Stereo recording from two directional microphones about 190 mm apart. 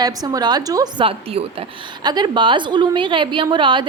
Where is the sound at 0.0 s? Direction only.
20° right (ahead or behind).